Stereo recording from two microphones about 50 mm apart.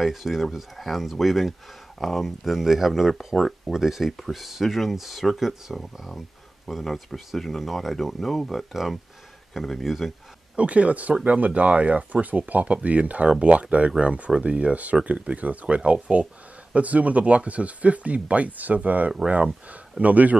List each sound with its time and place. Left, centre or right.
0.0 s speech: centre
10.5 s speech: right